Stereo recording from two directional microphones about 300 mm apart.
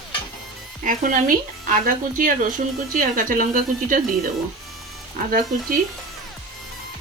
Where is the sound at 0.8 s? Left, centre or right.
Right.